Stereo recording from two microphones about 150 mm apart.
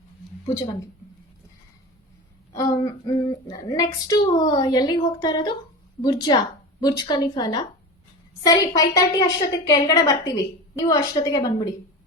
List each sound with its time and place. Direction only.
2.5 s a woman's voice: 25° left (ahead or behind)